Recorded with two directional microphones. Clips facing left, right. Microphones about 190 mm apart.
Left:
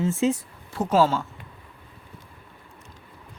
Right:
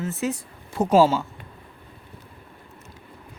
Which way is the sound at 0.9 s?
10° right (ahead or behind).